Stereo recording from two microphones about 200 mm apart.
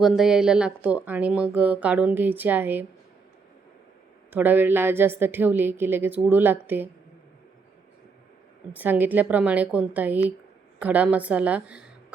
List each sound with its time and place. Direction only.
0.0 s a woman's voice: 5° right (ahead or behind)
4.3 s a woman's voice: 10° right (ahead or behind)
8.7 s a woman's voice: 10° right (ahead or behind)